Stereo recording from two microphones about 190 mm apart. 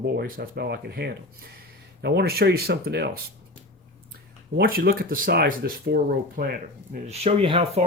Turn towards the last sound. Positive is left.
turn(degrees=-30)  # may be behind; listen again after turning